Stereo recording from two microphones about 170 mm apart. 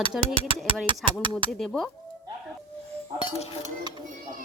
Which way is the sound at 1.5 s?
Centre (ahead or behind).